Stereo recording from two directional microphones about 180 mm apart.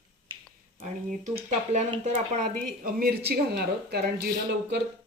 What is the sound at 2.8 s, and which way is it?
Speech, 60° right (ahead or behind).